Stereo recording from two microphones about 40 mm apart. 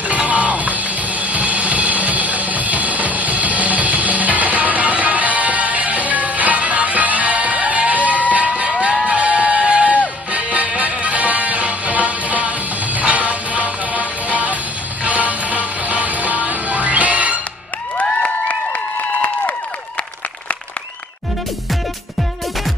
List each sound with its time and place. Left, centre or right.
0.3 s music: right